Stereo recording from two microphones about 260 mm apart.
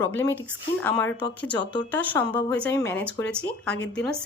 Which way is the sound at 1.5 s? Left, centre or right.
Centre.